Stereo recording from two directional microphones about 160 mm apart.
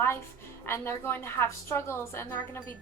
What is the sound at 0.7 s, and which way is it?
A woman's voice, 15° left (ahead or behind).